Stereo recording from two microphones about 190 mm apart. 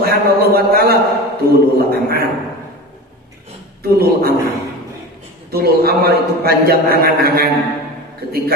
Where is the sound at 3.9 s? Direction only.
55° right (ahead or behind).